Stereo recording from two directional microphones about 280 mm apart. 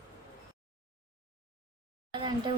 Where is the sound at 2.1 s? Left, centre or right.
Centre.